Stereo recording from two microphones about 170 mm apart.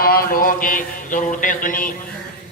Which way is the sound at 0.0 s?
60° left (ahead or behind).